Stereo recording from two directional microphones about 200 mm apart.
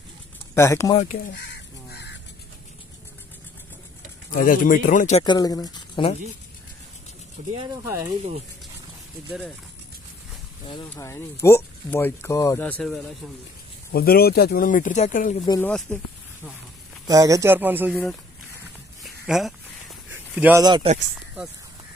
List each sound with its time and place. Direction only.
0.6 s speech: 15° left (ahead or behind)
0.9 s a man's voice: 40° left (ahead or behind)
4.4 s a man's voice: 45° left (ahead or behind)
5.2 s speech: 20° left (ahead or behind)
7.5 s a man's voice: 15° right (ahead or behind)
10.9 s speech: 15° left (ahead or behind)
13.9 s speech: 50° left (ahead or behind)
15.3 s speech: 20° left (ahead or behind)
15.6 s speech: 5° left (ahead or behind)
17.1 s a man's voice: 15° right (ahead or behind)
19.2 s speech: centre (ahead or behind)
20.1 s a sound: 10° right (ahead or behind)
20.6 s speech: 25° right (ahead or behind)